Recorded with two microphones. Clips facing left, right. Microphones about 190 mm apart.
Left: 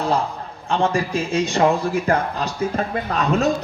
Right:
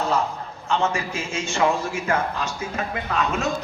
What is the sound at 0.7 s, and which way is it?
A man's voice, 35° left (ahead or behind).